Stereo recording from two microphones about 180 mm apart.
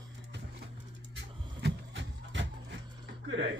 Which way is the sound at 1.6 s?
85° right.